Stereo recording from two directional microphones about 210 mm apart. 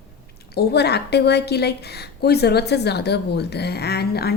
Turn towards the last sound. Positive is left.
turn(degrees=50)  # may be behind; listen again after turning